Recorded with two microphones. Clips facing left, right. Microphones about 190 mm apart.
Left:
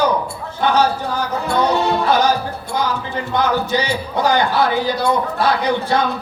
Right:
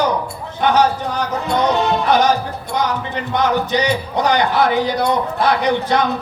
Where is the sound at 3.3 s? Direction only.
20° right (ahead or behind).